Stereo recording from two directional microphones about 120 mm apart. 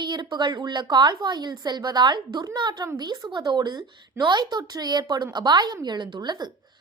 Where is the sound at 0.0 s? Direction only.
40° right (ahead or behind).